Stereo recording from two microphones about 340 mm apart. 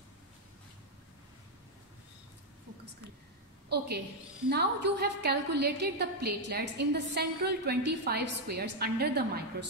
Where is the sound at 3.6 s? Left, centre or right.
Right.